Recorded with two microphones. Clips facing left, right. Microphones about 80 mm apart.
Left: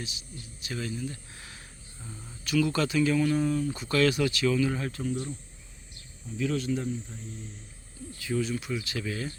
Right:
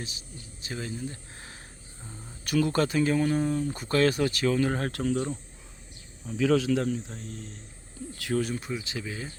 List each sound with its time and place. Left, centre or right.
0.0 s speech: right
2.4 s speech: right
8.2 s speech: right
8.5 s speech: right